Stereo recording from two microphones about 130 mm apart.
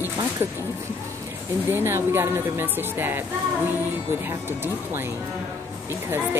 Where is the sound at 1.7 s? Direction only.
15° right (ahead or behind).